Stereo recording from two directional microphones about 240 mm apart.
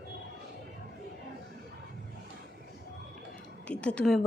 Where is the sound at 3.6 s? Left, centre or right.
Centre.